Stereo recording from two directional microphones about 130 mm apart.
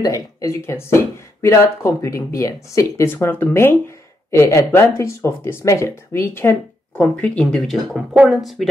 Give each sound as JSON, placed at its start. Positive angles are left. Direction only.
{"t": 0.0, "sound": "speech", "side_deg": 25}
{"t": 8.1, "sound": "speech", "side_deg": -10}
{"t": 8.4, "sound": "speech", "side_deg": 0}